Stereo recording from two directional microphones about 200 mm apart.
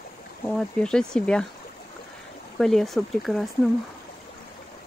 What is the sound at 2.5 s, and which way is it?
Speech, centre (ahead or behind).